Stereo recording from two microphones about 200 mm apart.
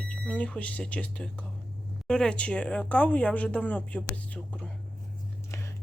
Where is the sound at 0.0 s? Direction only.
5° left (ahead or behind).